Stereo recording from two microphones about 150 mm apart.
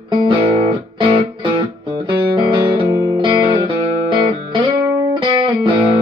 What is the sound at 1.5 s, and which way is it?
Music, 35° right (ahead or behind).